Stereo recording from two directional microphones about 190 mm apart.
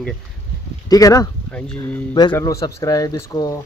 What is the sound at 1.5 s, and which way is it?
A man's voice, 5° left (ahead or behind).